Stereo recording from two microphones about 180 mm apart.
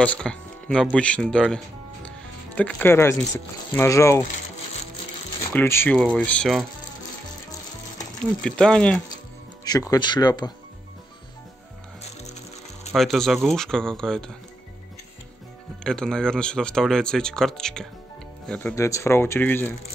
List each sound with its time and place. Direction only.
0.0 s speech: 5° left (ahead or behind)
2.0 s music: 5° left (ahead or behind)
3.7 s speech: 15° left (ahead or behind)
5.5 s speech: 10° left (ahead or behind)
8.4 s speech: 5° left (ahead or behind)
9.7 s speech: 20° left (ahead or behind)
12.9 s speech: centre (ahead or behind)
15.8 s speech: 5° left (ahead or behind)
18.8 s speech: 15° left (ahead or behind)